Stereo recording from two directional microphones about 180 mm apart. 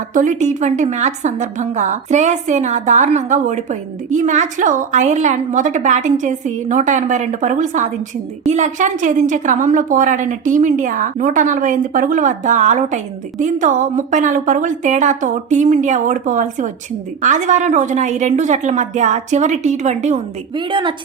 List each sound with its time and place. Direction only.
0.1 s a woman's voice: 45° right (ahead or behind)
20.6 s a woman's voice: 25° right (ahead or behind)